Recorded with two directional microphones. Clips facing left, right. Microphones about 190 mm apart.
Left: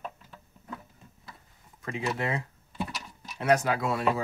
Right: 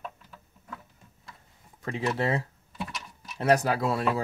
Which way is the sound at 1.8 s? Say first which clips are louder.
Right 3 dB; 30° right (ahead or behind).